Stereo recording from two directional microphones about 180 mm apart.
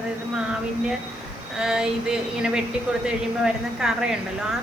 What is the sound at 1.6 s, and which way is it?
A woman's voice, 5° right (ahead or behind).